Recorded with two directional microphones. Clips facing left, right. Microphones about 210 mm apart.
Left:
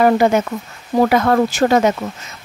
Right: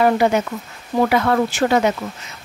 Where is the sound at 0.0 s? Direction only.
45° left (ahead or behind).